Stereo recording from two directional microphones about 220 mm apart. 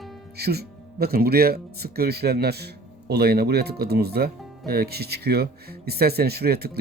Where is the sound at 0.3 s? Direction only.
45° right (ahead or behind).